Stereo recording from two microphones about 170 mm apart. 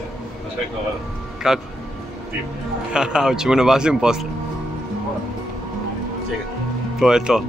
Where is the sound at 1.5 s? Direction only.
5° right (ahead or behind).